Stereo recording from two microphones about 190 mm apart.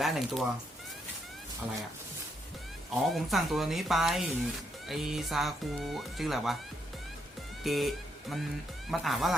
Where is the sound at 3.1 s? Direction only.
Centre (ahead or behind).